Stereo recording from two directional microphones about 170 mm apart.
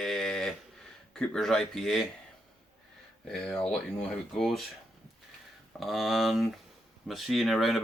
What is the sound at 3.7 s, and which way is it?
Speech, centre (ahead or behind).